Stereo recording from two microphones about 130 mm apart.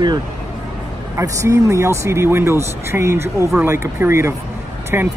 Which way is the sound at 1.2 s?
25° right (ahead or behind).